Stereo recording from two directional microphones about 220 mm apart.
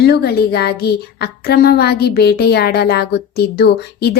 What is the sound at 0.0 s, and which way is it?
Speech, 45° left (ahead or behind).